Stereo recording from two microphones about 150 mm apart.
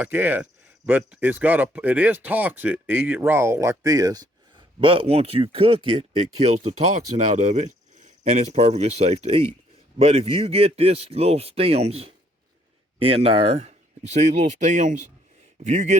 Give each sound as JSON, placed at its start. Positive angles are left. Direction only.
{"t": 0.0, "sound": "speech", "side_deg": -15}
{"t": 4.8, "sound": "speech", "side_deg": -35}